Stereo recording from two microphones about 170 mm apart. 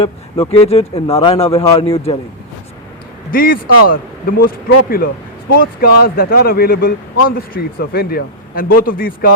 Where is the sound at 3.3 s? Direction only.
60° left (ahead or behind).